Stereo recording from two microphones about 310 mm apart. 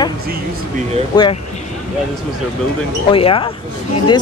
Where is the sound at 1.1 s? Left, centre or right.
Centre.